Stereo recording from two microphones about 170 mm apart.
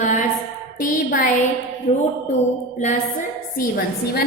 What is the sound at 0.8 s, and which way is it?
Speech, 55° left (ahead or behind).